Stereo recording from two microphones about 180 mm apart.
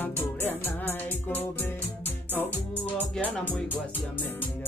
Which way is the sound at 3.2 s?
10° left (ahead or behind).